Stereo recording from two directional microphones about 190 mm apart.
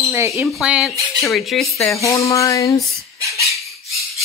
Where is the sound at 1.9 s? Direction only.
15° left (ahead or behind).